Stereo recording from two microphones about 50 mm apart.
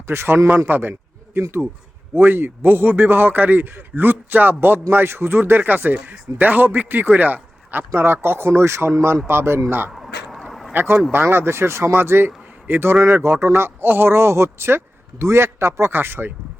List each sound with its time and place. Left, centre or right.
0.1 s a man's voice: right
7.9 s a man's voice: right
9.9 s a sound: centre
10.7 s a man's voice: right
16.0 s speech: right